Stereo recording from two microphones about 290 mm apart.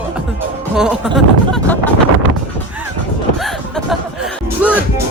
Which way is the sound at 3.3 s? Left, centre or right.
Centre.